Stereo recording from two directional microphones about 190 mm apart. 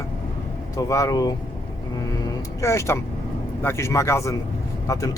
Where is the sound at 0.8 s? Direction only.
15° left (ahead or behind).